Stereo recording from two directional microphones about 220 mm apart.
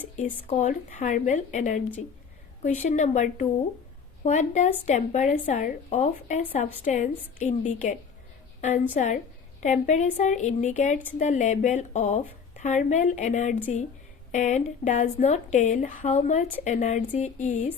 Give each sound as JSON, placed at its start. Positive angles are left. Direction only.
{"t": 0.2, "sound": "a woman's voice", "side_deg": 30}
{"t": 9.0, "sound": "a woman's voice", "side_deg": 35}